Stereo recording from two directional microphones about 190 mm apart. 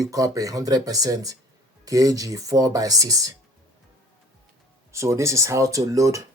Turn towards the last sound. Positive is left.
turn(degrees=-15)  # may be behind; listen again after turning